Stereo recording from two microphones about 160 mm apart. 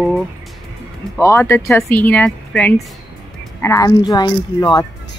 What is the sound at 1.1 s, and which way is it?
Speech, 15° left (ahead or behind).